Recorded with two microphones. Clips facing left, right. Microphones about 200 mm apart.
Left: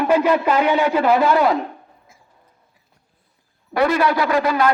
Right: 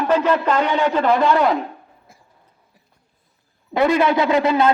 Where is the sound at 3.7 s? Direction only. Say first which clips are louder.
Right 1 dB; 20° right (ahead or behind).